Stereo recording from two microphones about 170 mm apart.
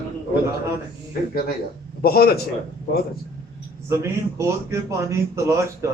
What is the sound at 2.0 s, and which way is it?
Speech, 65° left (ahead or behind).